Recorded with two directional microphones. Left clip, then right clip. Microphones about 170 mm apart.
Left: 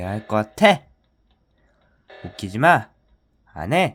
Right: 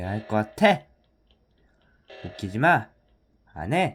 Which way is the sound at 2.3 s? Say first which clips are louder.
Left 5 dB; 20° left (ahead or behind).